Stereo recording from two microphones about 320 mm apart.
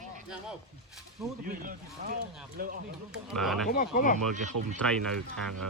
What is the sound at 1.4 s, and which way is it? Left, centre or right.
Speech, right.